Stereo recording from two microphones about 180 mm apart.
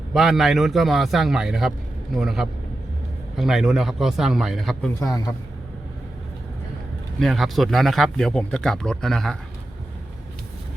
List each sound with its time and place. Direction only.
0.1 s speech: centre (ahead or behind)
4.9 s a man's voice: 20° left (ahead or behind)
7.2 s speech: centre (ahead or behind)